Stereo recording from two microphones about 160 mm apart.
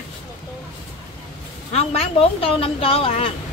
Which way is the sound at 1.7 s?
40° left (ahead or behind).